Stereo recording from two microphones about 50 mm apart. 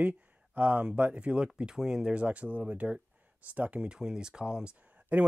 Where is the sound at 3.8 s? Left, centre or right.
Centre.